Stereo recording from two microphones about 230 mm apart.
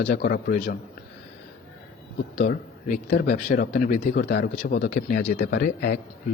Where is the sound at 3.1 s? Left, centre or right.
Left.